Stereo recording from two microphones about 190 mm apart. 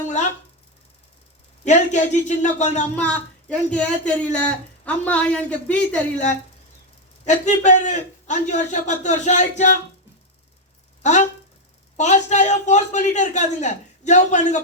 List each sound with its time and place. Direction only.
1.6 s a man's voice: 40° left (ahead or behind)
3.5 s speech: 5° left (ahead or behind)
7.3 s a man's voice: 40° left (ahead or behind)
11.0 s a man's voice: 40° left (ahead or behind)